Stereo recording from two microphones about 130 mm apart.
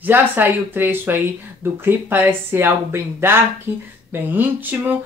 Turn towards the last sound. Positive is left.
turn(degrees=-15)  # may be behind; listen again after turning